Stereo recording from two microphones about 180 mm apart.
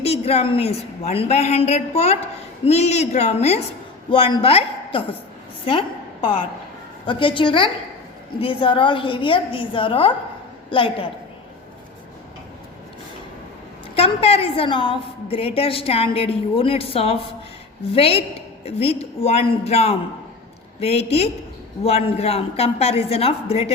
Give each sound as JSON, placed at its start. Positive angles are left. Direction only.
{"t": 0.0, "sound": "a woman's voice", "side_deg": 35}
{"t": 7.0, "sound": "a woman's voice", "side_deg": 25}
{"t": 13.9, "sound": "a woman's voice", "side_deg": 35}